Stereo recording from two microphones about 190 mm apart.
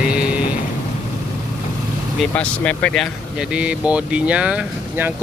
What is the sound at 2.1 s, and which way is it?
Speech, 5° left (ahead or behind).